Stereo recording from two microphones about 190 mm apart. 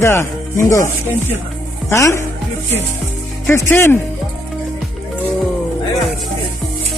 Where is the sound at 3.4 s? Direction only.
10° left (ahead or behind).